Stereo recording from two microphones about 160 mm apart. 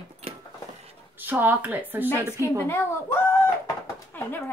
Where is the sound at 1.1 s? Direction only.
10° right (ahead or behind).